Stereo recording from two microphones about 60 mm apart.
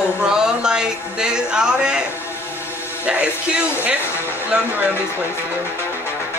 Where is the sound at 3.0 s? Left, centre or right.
Right.